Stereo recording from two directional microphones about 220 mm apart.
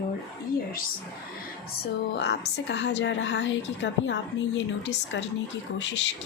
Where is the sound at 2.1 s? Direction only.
50° left (ahead or behind).